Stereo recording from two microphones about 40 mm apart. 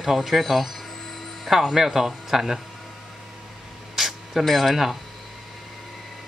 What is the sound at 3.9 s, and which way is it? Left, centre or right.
Speech, centre.